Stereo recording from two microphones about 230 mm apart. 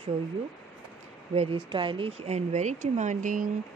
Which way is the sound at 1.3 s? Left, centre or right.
Right.